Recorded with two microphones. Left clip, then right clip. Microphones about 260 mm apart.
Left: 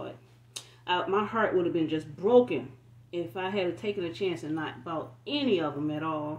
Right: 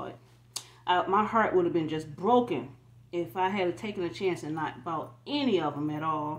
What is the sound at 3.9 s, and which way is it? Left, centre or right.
Speech, centre.